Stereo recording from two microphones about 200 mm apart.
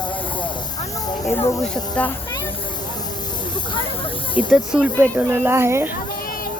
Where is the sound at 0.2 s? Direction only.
25° left (ahead or behind).